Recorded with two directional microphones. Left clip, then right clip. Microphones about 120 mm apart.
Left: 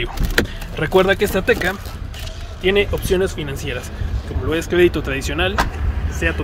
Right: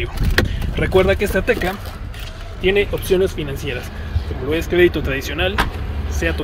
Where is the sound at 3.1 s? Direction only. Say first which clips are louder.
Right 2 dB; 5° right (ahead or behind).